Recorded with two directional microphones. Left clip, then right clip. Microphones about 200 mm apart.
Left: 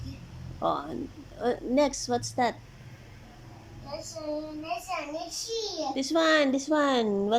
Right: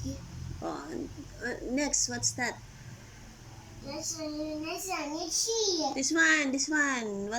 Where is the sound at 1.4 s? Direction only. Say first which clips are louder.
Left 8 dB; 20° left (ahead or behind).